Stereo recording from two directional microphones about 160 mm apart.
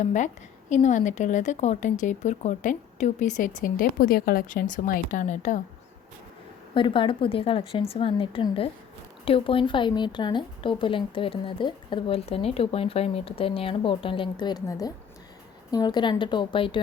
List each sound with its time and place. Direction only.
0.0 s speech: 50° left (ahead or behind)
6.7 s a woman's voice: 30° left (ahead or behind)